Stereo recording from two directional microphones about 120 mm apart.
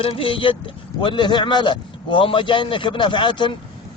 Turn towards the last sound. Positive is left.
turn(degrees=40)  # may be behind; listen again after turning